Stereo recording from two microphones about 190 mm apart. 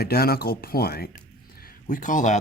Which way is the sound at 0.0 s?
55° left (ahead or behind).